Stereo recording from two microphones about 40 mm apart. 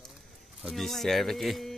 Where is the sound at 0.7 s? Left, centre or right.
Centre.